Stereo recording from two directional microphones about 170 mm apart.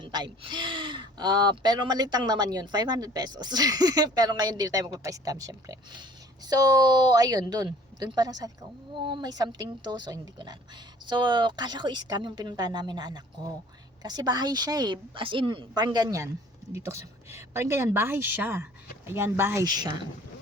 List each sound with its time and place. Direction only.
0.0 s speech: 25° right (ahead or behind)